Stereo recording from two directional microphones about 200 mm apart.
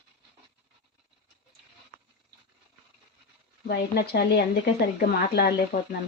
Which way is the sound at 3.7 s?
55° left (ahead or behind).